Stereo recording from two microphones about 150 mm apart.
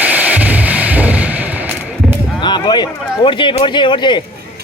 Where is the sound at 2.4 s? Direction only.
30° left (ahead or behind).